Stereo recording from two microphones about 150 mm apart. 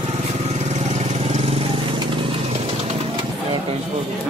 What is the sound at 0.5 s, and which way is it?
Vehicle, 50° right (ahead or behind).